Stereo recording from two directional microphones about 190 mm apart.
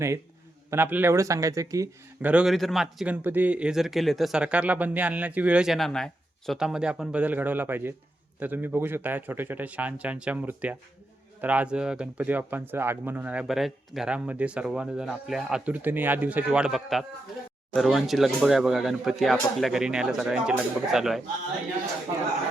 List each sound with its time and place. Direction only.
0.7 s speech: 10° right (ahead or behind)
2.3 s speech: centre (ahead or behind)